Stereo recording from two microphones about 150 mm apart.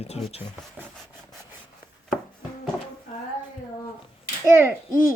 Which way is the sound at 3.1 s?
65° left (ahead or behind).